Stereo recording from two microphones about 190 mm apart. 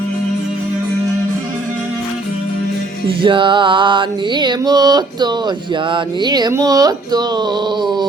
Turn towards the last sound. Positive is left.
turn(degrees=-25)  # may be behind; listen again after turning